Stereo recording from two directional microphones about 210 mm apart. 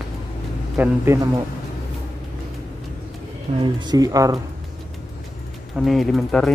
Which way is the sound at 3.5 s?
20° right (ahead or behind).